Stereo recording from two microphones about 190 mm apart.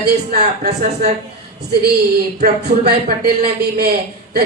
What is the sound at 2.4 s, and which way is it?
A man's voice, 55° right (ahead or behind).